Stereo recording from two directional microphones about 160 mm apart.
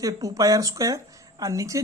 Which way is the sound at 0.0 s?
20° right (ahead or behind).